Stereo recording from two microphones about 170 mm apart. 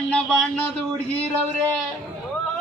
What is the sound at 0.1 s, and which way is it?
Speech, centre (ahead or behind).